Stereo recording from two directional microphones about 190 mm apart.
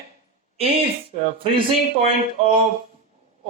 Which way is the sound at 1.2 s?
30° right (ahead or behind).